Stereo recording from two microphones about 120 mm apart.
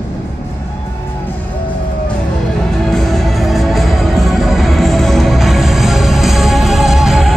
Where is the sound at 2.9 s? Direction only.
Centre (ahead or behind).